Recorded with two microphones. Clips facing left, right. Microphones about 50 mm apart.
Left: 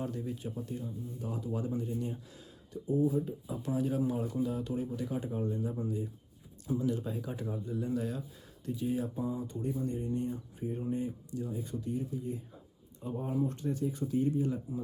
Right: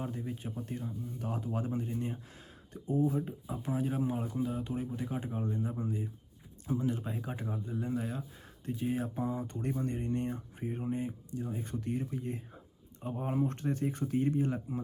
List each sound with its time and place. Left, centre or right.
0.0 s speech: right
0.6 s speech: right
4.3 s speech: centre
4.5 s speech: right
8.6 s speech: right
10.8 s speech: right
11.6 s speech: right
13.0 s speech: right